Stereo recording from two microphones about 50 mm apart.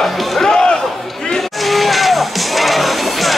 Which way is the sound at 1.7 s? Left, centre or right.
Centre.